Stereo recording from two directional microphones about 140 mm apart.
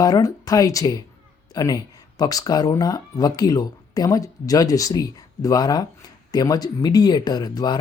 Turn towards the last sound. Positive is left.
turn(degrees=30)  # may be behind; listen again after turning